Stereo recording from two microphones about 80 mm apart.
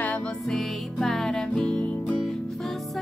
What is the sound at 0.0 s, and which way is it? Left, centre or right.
Music, centre.